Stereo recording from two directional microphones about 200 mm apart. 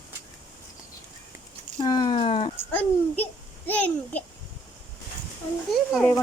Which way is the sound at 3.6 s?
10° left (ahead or behind).